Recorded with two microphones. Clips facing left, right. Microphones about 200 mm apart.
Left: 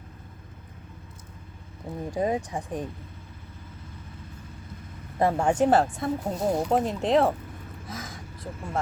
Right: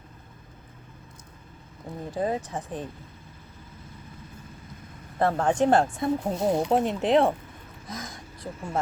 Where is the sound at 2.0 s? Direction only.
15° left (ahead or behind).